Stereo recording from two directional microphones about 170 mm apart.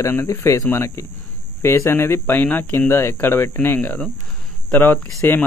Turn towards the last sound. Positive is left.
turn(degrees=10)  # may be behind; listen again after turning